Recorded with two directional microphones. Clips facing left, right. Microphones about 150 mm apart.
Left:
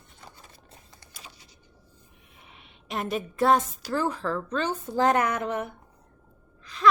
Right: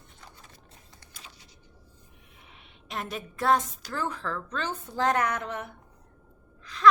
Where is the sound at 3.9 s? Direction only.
30° left (ahead or behind).